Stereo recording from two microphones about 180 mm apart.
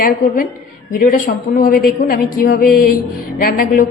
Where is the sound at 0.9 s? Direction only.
50° left (ahead or behind).